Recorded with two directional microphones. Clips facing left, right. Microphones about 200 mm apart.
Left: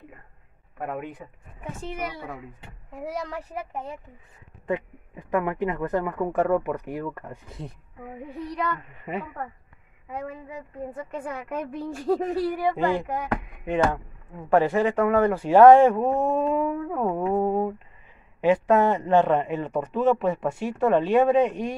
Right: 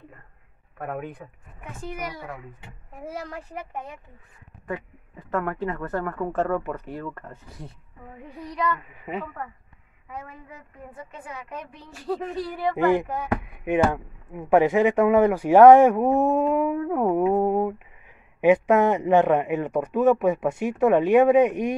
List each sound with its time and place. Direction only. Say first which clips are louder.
0.8 s speech: even; 5° left (ahead or behind)
1.8 s a woman's voice: even; 30° left (ahead or behind)
4.6 s a woman's voice: left 5 dB; 20° left (ahead or behind)
8.4 s speech: right 2 dB; 5° right (ahead or behind)
11.2 s a woman's voice: left 5 dB; 55° left (ahead or behind)
12.7 s speech: right 3 dB; 15° right (ahead or behind)